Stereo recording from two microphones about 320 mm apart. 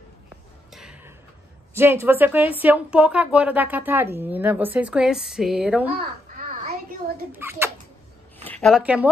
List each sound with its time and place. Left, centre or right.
0.7 s a sound: centre
1.7 s a woman's voice: centre
7.3 s speech: centre